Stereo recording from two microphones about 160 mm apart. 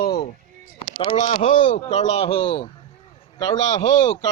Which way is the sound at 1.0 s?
50° left (ahead or behind).